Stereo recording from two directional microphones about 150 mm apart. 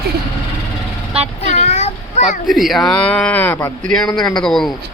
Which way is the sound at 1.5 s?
45° left (ahead or behind).